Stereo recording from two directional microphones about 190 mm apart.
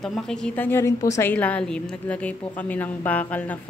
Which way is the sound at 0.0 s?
5° left (ahead or behind).